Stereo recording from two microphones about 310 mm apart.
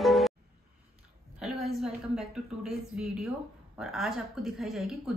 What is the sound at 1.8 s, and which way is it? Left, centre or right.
A woman's voice, centre.